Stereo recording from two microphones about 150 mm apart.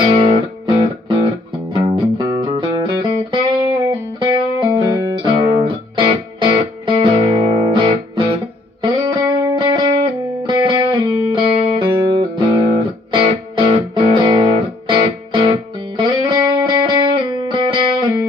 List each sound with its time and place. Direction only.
0.1 s music: 35° right (ahead or behind)